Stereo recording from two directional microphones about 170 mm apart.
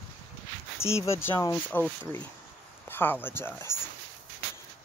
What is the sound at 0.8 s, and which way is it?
Speech, 15° left (ahead or behind).